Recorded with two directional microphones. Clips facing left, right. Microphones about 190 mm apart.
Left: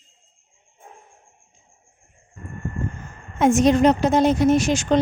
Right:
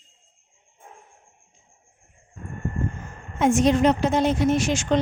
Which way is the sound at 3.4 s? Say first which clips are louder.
Left 3 dB; 45° left (ahead or behind).